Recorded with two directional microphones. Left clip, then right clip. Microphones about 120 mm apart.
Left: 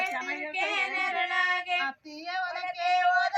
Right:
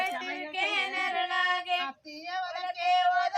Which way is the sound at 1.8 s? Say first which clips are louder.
Left 3 dB; 40° right (ahead or behind).